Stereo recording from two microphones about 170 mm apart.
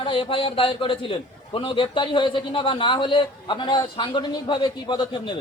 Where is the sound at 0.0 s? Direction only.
30° left (ahead or behind).